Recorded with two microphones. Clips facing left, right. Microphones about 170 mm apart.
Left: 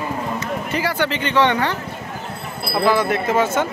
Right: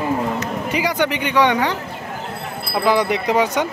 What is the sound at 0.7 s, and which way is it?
Speech, 15° right (ahead or behind).